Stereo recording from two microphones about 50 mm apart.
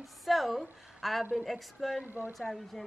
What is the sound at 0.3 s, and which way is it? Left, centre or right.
A woman's voice, centre.